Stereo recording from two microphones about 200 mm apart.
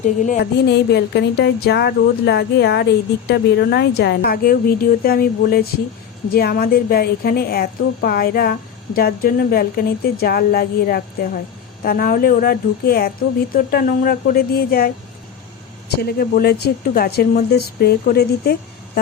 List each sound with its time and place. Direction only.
0.0 s a woman's voice: 40° left (ahead or behind)
16.0 s speech: 50° left (ahead or behind)